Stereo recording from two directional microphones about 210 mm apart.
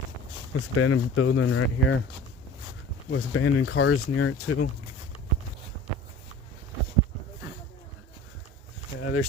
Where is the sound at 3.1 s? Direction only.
75° left (ahead or behind).